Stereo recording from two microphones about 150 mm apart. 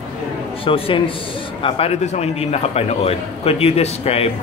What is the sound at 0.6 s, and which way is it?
A man's voice, 35° left (ahead or behind).